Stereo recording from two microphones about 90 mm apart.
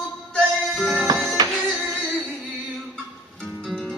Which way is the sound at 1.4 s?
50° right (ahead or behind).